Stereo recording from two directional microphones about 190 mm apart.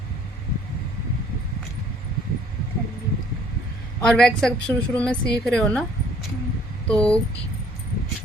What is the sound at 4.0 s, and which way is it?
A woman's voice, 5° left (ahead or behind).